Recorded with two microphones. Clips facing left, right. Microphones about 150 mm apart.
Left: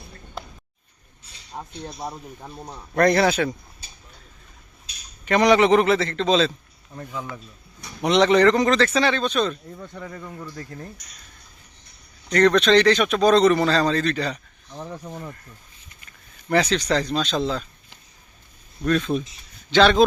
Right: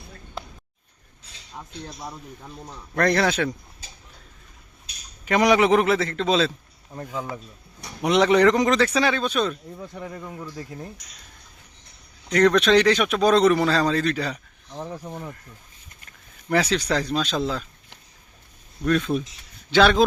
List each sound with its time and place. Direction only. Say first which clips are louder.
1.5 s speech: left 3 dB; 30° left (ahead or behind)
3.0 s speech: left 3 dB; 10° left (ahead or behind)
5.2 s a man's voice: left 2 dB; 10° right (ahead or behind)
6.9 s speech: right 2 dB; 25° right (ahead or behind)
8.0 s speech: left 1 dB; 5° right (ahead or behind)
12.3 s speech: left 1 dB; 5° right (ahead or behind)
18.9 s a man's voice: even; 5° right (ahead or behind)